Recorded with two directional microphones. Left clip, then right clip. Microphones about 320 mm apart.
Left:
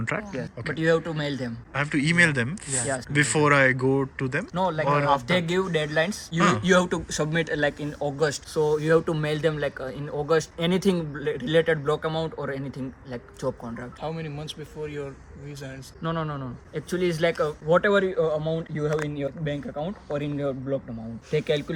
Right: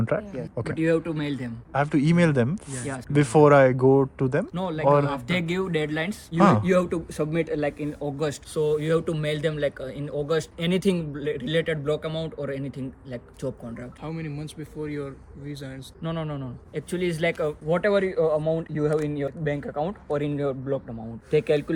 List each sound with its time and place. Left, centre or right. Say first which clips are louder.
0.0 s speech: right 2 dB; centre
0.7 s a man's voice: left 1 dB; centre
1.7 s speech: even; centre
4.5 s a man's voice: right 1 dB; centre
8.2 s a man's voice: left 2 dB; centre